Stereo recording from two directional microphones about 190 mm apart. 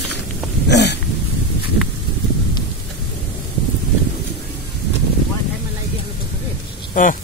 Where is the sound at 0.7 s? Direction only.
65° left (ahead or behind).